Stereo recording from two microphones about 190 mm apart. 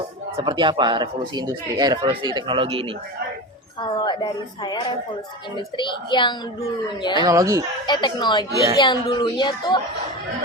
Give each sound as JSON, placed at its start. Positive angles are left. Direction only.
{"t": 0.3, "sound": "speech", "side_deg": -25}
{"t": 3.8, "sound": "speech", "side_deg": 25}
{"t": 7.2, "sound": "speech", "side_deg": -20}
{"t": 7.9, "sound": "speech", "side_deg": 25}